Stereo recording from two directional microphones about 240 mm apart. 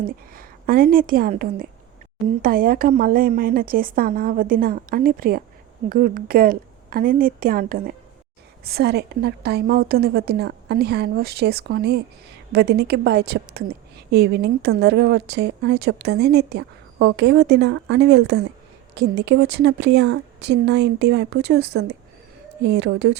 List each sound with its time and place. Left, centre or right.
0.0 s a woman's voice: right